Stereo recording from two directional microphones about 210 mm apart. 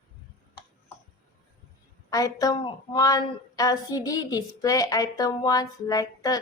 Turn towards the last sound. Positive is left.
turn(degrees=15)  # may be behind; listen again after turning